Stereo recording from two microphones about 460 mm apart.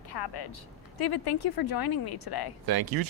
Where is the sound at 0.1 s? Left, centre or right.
Left.